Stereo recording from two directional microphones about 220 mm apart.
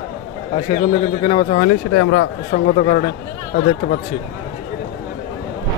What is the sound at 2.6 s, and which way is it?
Speech, 40° left (ahead or behind).